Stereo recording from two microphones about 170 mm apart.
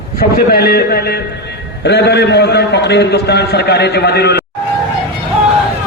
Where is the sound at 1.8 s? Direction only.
80° left.